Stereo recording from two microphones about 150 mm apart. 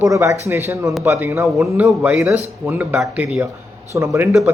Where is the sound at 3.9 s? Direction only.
20° right (ahead or behind).